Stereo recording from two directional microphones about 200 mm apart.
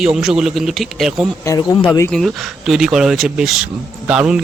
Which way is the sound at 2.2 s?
Centre (ahead or behind).